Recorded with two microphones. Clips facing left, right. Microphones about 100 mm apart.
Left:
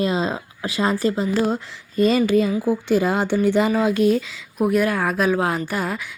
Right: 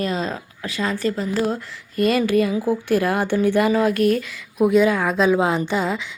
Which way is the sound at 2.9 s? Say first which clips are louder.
Even; 20° left (ahead or behind).